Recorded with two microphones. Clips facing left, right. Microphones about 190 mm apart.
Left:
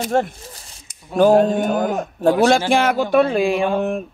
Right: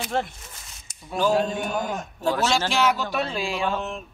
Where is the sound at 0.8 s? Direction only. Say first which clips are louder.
Left 9 dB; 55° left (ahead or behind).